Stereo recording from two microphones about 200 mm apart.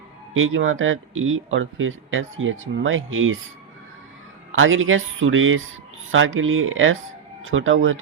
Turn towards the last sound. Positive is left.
turn(degrees=-75)  # may be behind; listen again after turning